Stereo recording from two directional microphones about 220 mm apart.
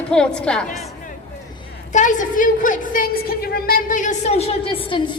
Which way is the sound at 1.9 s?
35° left (ahead or behind).